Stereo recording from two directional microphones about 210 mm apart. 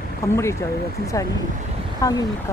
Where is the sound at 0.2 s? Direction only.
15° left (ahead or behind).